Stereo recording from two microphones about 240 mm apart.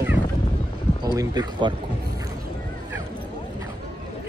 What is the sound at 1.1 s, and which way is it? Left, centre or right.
Speech, centre.